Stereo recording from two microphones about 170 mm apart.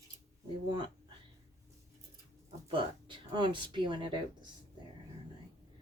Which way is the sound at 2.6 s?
30° right (ahead or behind).